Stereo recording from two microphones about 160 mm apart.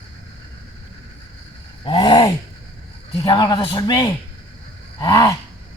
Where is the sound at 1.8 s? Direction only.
30° left (ahead or behind).